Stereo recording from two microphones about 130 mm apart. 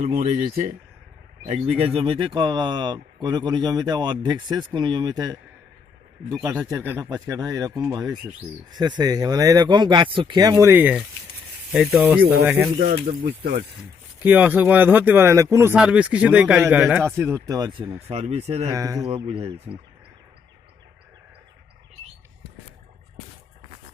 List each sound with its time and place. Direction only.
0.0 s speech: 65° right (ahead or behind); by 0.8 s 90° right
1.5 s speech: 55° right (ahead or behind); by 10.9 s 15° right (ahead or behind)
11.7 s speech: 5° right (ahead or behind)
12.8 s speech: 90° right
14.2 s speech: 15° right (ahead or behind)
15.7 s speech: 10° right (ahead or behind); by 17.7 s 25° right (ahead or behind)
17.7 s speech: 40° right (ahead or behind)
18.1 s speech: 55° right (ahead or behind)
18.7 s speech: 25° right (ahead or behind)
19.0 s speech: 50° right (ahead or behind)